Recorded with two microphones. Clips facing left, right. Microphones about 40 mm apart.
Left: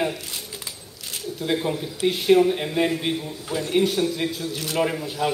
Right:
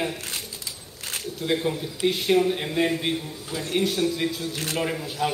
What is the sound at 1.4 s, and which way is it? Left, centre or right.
A man's voice, centre.